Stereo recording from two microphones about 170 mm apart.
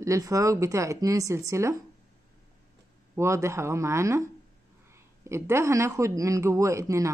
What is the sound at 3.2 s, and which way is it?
Speech, 15° right (ahead or behind).